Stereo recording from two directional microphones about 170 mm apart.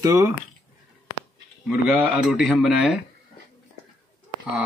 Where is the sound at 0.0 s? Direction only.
15° right (ahead or behind).